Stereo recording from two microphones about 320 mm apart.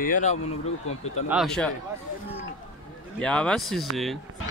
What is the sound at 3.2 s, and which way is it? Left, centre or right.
Speech, centre.